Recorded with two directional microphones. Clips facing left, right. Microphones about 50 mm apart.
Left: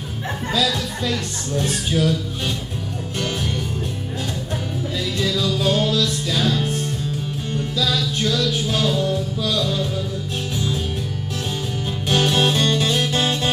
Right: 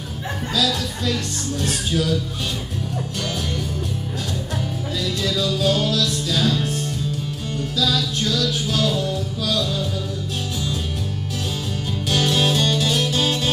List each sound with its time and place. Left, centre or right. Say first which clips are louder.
0.5 s speech: left 1 dB; left
5.6 s music: left 1 dB; left
8.4 s speech: left 1 dB; left
12.1 s music: left 2 dB; left